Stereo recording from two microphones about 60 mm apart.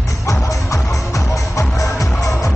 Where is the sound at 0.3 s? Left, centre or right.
Left.